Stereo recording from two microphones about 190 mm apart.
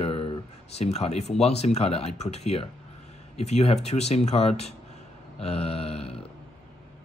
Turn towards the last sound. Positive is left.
turn(degrees=30)  # may be behind; listen again after turning